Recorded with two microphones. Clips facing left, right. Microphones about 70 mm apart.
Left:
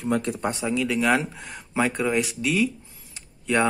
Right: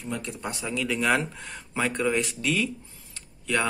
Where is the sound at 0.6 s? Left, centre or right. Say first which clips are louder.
Left 2 dB; centre.